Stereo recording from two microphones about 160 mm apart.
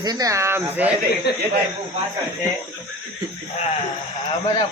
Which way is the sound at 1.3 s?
90° left.